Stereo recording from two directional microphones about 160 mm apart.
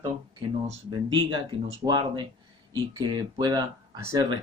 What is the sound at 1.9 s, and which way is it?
Speech, 25° right (ahead or behind).